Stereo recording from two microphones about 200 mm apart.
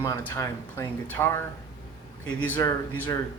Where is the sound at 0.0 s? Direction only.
15° left (ahead or behind).